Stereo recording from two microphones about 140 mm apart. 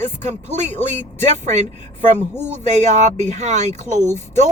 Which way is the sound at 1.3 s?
55° right (ahead or behind).